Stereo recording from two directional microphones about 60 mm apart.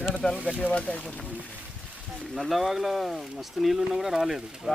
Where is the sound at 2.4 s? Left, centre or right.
Centre.